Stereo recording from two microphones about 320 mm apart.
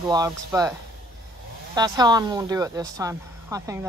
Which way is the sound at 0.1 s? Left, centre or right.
Centre.